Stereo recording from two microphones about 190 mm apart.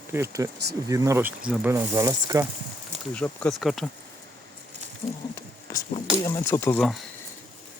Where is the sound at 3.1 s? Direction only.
5° left (ahead or behind).